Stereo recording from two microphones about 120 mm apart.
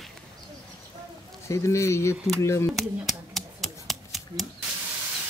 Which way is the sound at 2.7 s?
Centre (ahead or behind).